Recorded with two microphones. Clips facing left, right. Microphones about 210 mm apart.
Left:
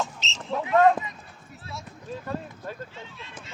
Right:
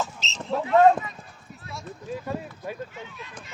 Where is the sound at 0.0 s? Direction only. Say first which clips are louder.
Right 1 dB; centre (ahead or behind).